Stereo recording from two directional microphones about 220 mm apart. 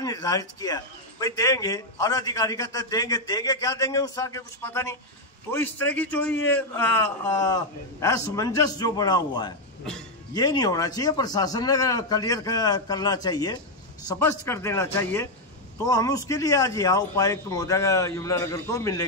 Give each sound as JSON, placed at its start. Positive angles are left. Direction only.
{"t": 0.0, "sound": "a man's voice", "side_deg": 15}